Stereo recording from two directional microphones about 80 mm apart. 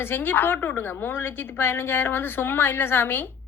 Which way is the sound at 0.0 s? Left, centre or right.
Left.